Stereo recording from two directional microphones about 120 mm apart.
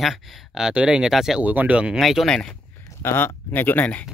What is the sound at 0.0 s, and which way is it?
Speech, centre (ahead or behind).